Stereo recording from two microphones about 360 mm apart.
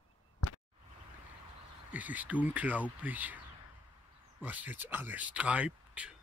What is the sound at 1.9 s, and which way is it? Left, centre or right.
Speech, centre.